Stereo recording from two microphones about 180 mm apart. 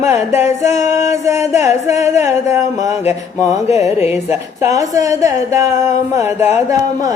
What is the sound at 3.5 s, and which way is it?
Mantra, 40° left (ahead or behind).